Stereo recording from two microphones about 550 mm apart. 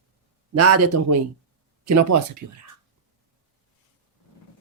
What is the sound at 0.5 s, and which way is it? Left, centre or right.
Speech, right.